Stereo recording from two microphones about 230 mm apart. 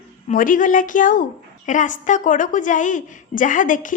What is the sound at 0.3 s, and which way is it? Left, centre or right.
A woman's voice, left.